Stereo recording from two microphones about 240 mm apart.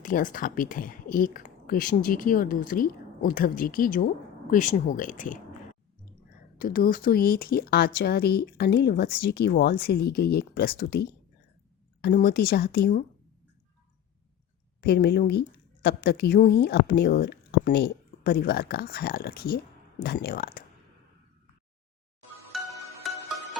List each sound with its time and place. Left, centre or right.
0.0 s a woman's voice: left
6.6 s a woman's voice: left
12.0 s a woman's voice: left
14.8 s a woman's voice: left
22.5 s music: centre